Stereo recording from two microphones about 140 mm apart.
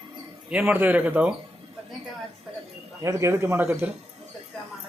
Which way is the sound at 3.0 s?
20° right (ahead or behind).